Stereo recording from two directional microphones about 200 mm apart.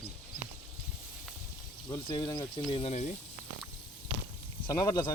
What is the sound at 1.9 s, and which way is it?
Speech, 20° left (ahead or behind).